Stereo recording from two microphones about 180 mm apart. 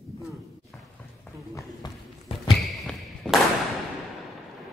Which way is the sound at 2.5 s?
Centre (ahead or behind).